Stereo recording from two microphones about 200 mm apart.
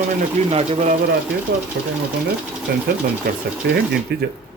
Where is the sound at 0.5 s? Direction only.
35° right (ahead or behind).